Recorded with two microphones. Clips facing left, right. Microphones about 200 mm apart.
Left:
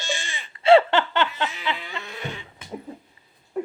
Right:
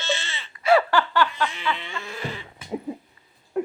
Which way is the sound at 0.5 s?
25° left (ahead or behind).